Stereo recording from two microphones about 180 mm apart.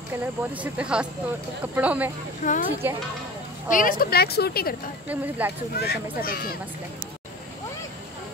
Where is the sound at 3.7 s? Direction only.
50° left (ahead or behind).